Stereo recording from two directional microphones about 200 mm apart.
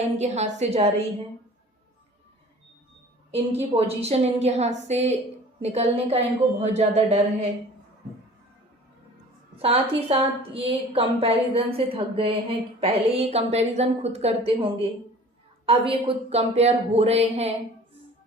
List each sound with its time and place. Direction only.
0.2 s speech: 35° right (ahead or behind)
3.3 s speech: 30° right (ahead or behind)
9.6 s a woman's voice: 30° right (ahead or behind)